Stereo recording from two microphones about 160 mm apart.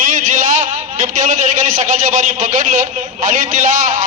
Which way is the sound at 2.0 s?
55° right (ahead or behind).